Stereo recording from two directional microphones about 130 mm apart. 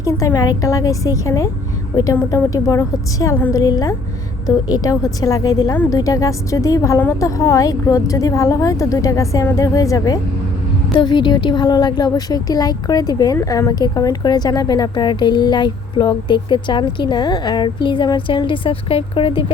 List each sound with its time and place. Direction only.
0.0 s a woman's voice: 25° left (ahead or behind)
10.9 s a woman's voice: 35° left (ahead or behind)